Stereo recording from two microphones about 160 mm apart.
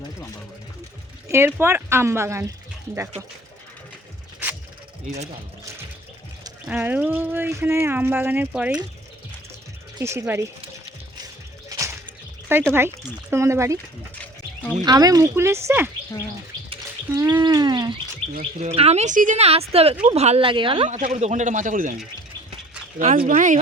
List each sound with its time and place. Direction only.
1.3 s speech: 15° right (ahead or behind)
5.1 s a man's voice: 50° right (ahead or behind)
6.7 s speech: 10° right (ahead or behind)
10.0 s speech: 15° right (ahead or behind)
12.5 s speech: 15° right (ahead or behind)
14.8 s speech: 25° right (ahead or behind)
16.6 s bird: 25° right (ahead or behind)
17.4 s a sound: 25° right (ahead or behind)
18.7 s speech: 40° right (ahead or behind)
20.9 s a man's voice: 50° right (ahead or behind)
23.0 s a man's voice: 40° right (ahead or behind)
23.2 s a man's voice: 55° right (ahead or behind)